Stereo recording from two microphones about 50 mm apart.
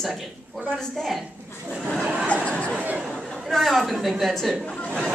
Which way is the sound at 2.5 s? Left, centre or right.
Left.